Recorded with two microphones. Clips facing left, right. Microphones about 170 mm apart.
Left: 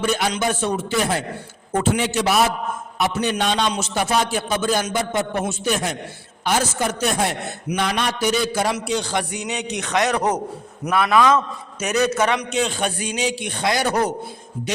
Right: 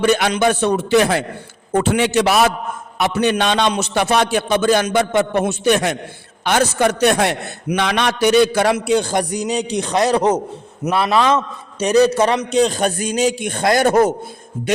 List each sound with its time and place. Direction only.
0.0 s a man's voice: 75° right (ahead or behind); by 14.1 s 50° right (ahead or behind)